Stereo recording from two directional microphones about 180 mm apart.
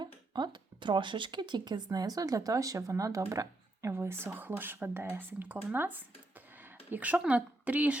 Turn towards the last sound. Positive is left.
turn(degrees=-10)  # may be behind; listen again after turning